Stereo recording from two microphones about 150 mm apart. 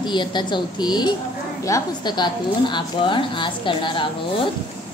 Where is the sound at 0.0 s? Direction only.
30° left (ahead or behind).